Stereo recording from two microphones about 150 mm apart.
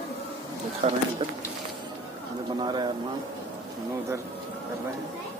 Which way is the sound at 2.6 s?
30° right (ahead or behind).